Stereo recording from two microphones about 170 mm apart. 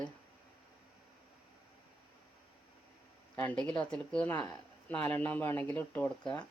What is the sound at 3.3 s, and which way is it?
Speech, 10° left (ahead or behind).